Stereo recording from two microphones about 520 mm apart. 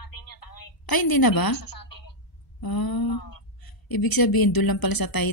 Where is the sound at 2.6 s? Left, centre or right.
Left.